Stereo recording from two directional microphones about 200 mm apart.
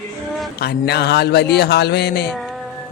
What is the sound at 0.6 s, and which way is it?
Speech, 55° left (ahead or behind).